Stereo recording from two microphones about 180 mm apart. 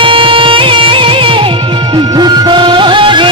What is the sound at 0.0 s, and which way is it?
Music, 30° right (ahead or behind).